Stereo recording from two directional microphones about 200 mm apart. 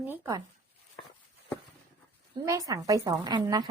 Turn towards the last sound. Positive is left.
turn(degrees=-20)  # may be behind; listen again after turning